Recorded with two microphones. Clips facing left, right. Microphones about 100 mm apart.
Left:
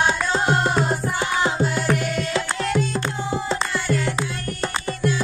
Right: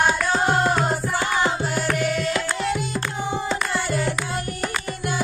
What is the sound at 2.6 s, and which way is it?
Music, 5° right (ahead or behind).